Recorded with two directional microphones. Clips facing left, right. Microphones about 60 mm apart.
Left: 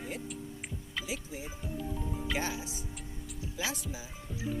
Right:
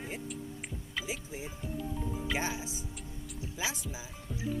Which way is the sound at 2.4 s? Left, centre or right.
Centre.